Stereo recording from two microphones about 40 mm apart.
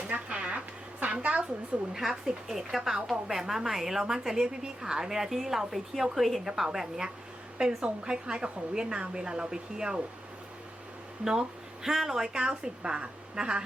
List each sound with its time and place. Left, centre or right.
0.1 s a sound: right
1.9 s a woman's voice: centre
7.8 s a woman's voice: right
11.3 s speech: centre
12.4 s a woman's voice: right